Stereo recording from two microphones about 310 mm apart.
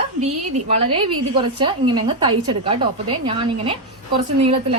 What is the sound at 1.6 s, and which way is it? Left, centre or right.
A woman's voice, centre.